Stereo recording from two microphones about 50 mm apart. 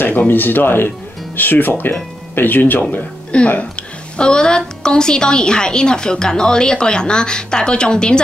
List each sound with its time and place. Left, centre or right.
0.3 s speech: left
3.3 s a woman's voice: left